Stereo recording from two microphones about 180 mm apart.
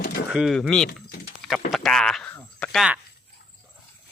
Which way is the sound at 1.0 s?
60° left (ahead or behind).